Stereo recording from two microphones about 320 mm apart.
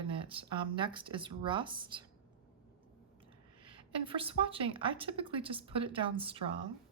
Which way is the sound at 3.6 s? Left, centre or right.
Centre.